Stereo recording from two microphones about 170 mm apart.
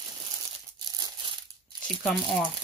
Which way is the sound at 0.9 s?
25° right (ahead or behind).